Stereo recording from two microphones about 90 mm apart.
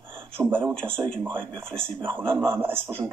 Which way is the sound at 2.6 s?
25° right (ahead or behind).